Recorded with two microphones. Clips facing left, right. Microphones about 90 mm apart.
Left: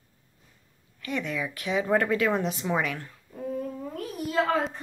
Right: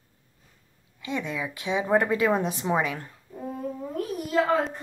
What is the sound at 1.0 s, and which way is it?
A woman's voice, 20° right (ahead or behind).